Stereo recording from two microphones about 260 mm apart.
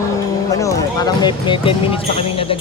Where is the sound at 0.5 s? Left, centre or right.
Centre.